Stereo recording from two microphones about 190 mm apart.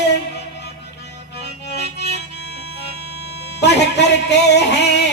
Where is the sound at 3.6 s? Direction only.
65° left (ahead or behind).